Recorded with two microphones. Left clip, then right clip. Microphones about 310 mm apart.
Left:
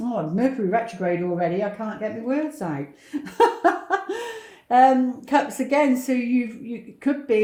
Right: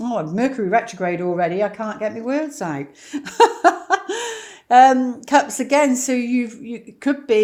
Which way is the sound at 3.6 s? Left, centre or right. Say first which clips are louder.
Right 5 dB; right.